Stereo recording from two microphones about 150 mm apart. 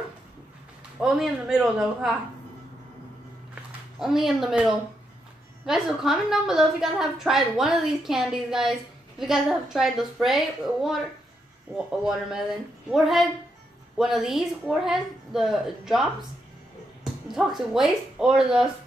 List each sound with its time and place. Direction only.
1.0 s a woman's voice: 5° right (ahead or behind)
4.0 s a woman's voice: centre (ahead or behind)